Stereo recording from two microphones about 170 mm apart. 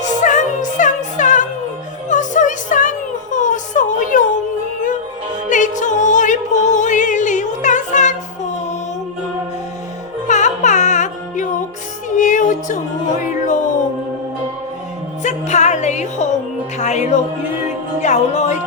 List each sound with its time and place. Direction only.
0.0 s music: 45° left (ahead or behind)
5.5 s music: 45° left (ahead or behind)
10.2 s music: 45° left (ahead or behind)
15.2 s music: 45° left (ahead or behind)